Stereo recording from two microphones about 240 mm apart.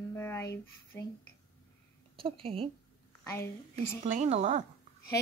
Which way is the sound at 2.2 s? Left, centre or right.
Right.